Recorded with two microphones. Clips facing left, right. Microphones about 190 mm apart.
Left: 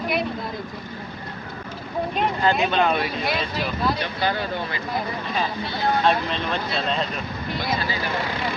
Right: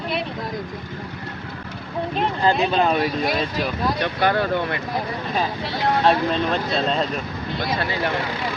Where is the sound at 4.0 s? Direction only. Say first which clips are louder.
Right 5 dB; 65° right (ahead or behind).